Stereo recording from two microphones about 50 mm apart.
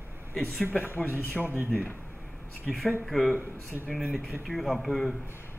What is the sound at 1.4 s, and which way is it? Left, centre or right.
Speech, right.